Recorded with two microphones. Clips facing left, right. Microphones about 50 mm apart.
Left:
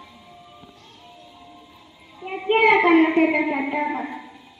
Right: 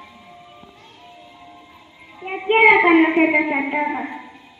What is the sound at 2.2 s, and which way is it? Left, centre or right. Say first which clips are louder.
Child singing: right 4 dB; right.